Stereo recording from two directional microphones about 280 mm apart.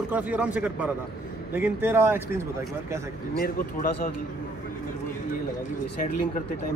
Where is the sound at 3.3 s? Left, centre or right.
Left.